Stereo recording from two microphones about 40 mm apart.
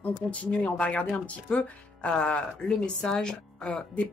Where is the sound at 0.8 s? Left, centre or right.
Left.